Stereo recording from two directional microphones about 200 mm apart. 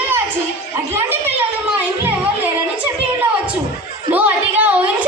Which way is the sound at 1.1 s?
10° right (ahead or behind).